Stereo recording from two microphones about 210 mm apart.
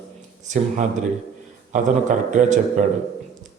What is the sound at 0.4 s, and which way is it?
Speech, 35° right (ahead or behind).